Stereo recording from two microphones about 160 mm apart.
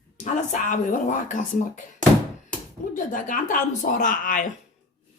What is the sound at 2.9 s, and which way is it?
Speech, 55° left (ahead or behind).